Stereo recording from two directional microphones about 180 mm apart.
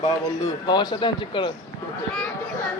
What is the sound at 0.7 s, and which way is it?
Speech, 25° left (ahead or behind).